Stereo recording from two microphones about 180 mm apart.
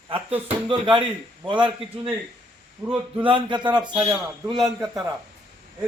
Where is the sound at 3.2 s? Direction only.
25° right (ahead or behind).